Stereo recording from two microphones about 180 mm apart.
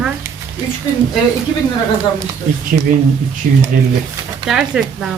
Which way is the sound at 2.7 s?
40° right (ahead or behind).